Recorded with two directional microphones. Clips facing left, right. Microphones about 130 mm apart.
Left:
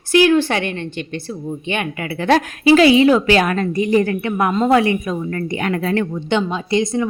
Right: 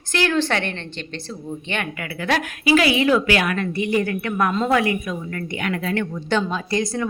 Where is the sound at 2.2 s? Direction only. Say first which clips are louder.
Left 7 dB; 30° left (ahead or behind).